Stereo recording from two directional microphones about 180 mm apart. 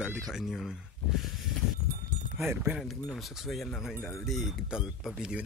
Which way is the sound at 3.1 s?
Centre (ahead or behind).